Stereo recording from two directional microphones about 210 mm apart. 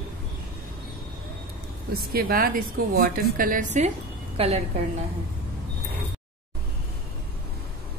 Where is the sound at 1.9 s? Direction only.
45° right (ahead or behind); by 4.6 s 30° right (ahead or behind).